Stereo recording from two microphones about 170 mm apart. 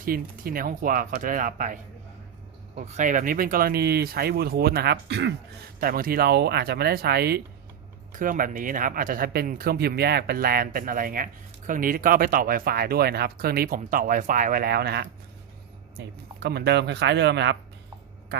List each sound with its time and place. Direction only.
0.0 s speech: 55° right (ahead or behind); by 5.3 s 85° right
5.8 s speech: 60° right (ahead or behind)
8.1 s speech: 50° right (ahead or behind); by 17.6 s 90° right
18.3 s quack: 75° right (ahead or behind)